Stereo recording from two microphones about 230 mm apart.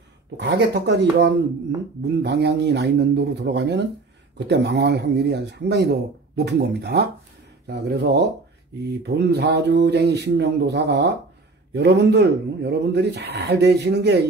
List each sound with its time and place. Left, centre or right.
0.4 s speech: right